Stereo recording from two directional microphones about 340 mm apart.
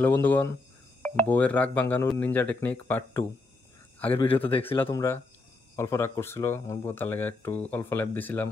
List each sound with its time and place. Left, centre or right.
0.0 s speech: centre